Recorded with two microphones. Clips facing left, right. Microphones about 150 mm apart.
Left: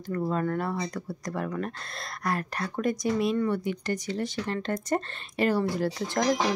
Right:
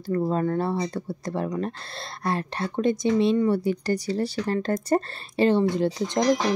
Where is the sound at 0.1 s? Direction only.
30° right (ahead or behind).